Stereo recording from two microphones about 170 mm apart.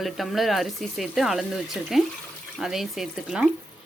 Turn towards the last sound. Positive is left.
turn(degrees=-5)  # may be behind; listen again after turning